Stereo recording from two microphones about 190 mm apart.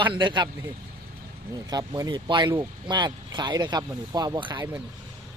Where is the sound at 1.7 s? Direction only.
20° right (ahead or behind).